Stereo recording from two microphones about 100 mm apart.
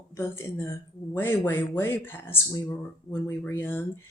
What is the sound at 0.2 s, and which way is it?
Speech, 25° left (ahead or behind).